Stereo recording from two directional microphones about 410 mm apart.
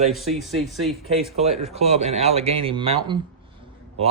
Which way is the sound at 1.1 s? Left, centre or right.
Centre.